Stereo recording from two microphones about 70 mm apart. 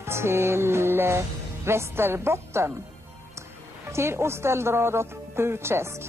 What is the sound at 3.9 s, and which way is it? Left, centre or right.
A woman's voice, right.